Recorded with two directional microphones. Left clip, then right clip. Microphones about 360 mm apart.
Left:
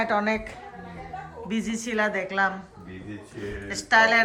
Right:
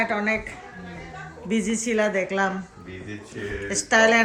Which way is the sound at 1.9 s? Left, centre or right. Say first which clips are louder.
Right 1 dB; centre.